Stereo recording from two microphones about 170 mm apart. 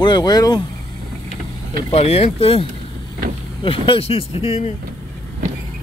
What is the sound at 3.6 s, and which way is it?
Speech, 30° left (ahead or behind).